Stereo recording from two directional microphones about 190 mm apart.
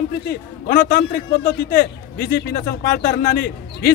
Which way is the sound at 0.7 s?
50° left (ahead or behind).